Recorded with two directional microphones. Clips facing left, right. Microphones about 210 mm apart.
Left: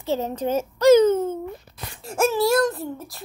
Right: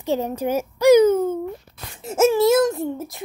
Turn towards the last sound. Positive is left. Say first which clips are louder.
# right 5 dB
turn(degrees=-20)  # may be behind; listen again after turning